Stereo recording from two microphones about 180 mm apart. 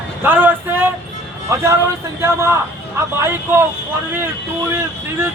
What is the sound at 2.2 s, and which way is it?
Speech, 15° right (ahead or behind).